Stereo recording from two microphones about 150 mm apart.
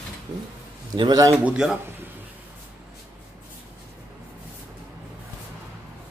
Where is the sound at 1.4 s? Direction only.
5° right (ahead or behind).